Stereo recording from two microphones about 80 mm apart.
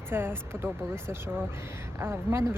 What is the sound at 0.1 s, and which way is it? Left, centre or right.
Speech, right.